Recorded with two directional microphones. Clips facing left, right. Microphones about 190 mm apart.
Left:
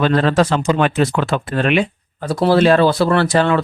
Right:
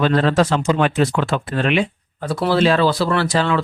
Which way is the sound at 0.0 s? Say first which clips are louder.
Left 1 dB; 60° left (ahead or behind).